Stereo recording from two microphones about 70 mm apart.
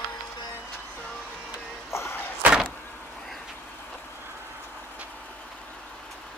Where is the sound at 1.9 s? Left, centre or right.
Left.